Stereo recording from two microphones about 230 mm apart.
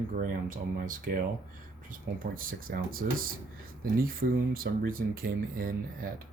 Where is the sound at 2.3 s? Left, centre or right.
Right.